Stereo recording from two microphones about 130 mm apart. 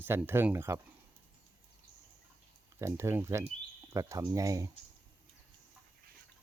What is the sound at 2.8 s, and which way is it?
Speech, 20° right (ahead or behind).